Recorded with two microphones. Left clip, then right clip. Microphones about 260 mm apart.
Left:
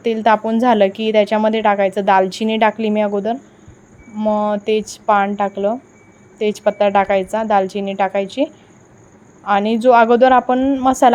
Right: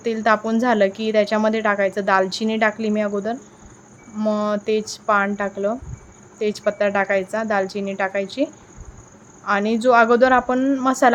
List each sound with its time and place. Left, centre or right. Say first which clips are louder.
0.0 s speech: left 4 dB; centre
9.5 s speech: left 4 dB; centre